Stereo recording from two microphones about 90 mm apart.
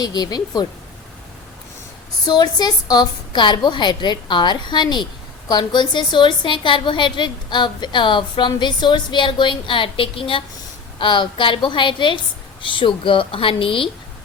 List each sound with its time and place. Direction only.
0.0 s speech: 50° left (ahead or behind)
2.2 s a woman's voice: 50° left (ahead or behind); by 10.4 s 75° left (ahead or behind)
10.9 s a woman's voice: 65° left (ahead or behind); by 13.9 s 80° left